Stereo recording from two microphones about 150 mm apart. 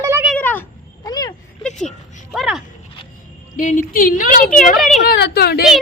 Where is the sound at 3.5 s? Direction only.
60° left (ahead or behind).